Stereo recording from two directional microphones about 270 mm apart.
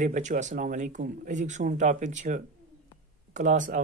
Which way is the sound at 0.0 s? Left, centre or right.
Right.